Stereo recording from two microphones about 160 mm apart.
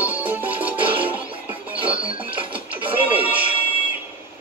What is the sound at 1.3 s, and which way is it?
Music, 35° right (ahead or behind).